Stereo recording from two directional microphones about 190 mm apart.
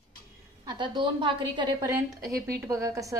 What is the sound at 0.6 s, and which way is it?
A woman's voice, 20° right (ahead or behind).